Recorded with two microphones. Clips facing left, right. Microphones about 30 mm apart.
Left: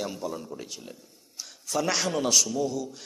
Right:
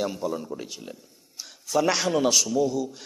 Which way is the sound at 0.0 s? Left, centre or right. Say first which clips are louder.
Right 5 dB; centre.